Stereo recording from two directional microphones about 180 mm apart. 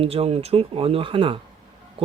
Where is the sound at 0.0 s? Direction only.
35° right (ahead or behind).